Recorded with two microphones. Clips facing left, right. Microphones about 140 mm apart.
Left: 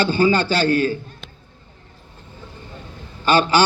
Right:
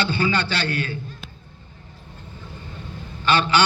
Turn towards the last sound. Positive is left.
turn(degrees=40)  # may be behind; listen again after turning